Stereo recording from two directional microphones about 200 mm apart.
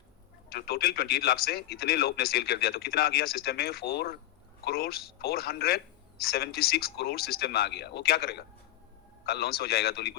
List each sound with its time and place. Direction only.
0.5 s speech: 50° left (ahead or behind)